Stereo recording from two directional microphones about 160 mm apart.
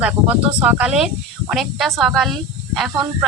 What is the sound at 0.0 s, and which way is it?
Speech, 10° right (ahead or behind).